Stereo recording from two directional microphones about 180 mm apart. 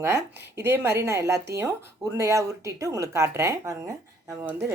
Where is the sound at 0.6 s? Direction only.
15° right (ahead or behind).